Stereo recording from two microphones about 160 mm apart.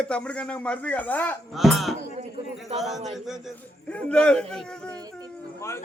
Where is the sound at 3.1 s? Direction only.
Centre (ahead or behind).